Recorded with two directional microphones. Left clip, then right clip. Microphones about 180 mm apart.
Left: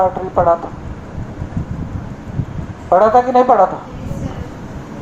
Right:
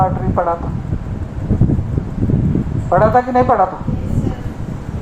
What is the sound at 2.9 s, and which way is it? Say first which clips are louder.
Speech: left 2 dB; 40° left (ahead or behind).